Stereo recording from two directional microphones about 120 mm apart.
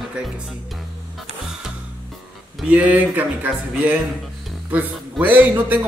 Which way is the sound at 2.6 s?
15° right (ahead or behind).